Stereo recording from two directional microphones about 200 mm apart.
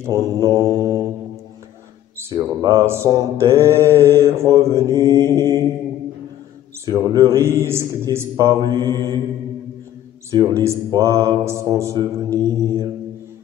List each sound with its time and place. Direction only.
0.0 s mantra: 15° right (ahead or behind)
2.1 s mantra: 15° right (ahead or behind)
6.9 s mantra: 20° right (ahead or behind)
10.3 s mantra: 15° right (ahead or behind)